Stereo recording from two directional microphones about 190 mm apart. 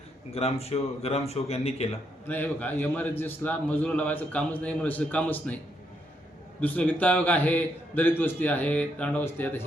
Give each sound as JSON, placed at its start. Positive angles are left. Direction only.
{"t": 0.3, "sound": "a man's voice", "side_deg": 30}
{"t": 2.2, "sound": "a man's voice", "side_deg": 10}
{"t": 6.6, "sound": "a man's voice", "side_deg": 10}